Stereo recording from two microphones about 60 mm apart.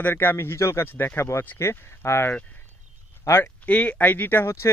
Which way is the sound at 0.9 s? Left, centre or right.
Left.